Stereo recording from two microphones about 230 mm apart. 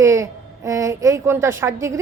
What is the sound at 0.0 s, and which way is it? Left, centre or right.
A woman's voice, centre.